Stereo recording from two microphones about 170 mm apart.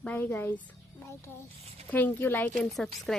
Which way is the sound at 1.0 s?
15° left (ahead or behind).